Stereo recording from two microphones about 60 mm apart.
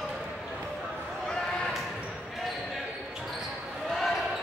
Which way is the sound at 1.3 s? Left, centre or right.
Centre.